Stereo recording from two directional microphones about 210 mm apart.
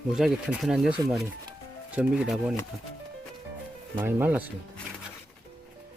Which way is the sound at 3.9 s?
10° right (ahead or behind).